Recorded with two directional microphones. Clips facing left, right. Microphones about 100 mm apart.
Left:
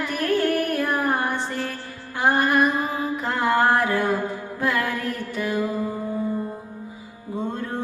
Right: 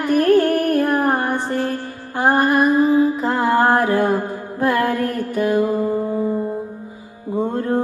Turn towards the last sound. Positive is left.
turn(degrees=-50)  # may be behind; listen again after turning